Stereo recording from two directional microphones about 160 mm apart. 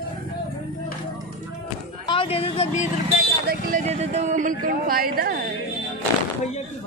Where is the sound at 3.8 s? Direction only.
45° right (ahead or behind); by 5.4 s 70° right (ahead or behind).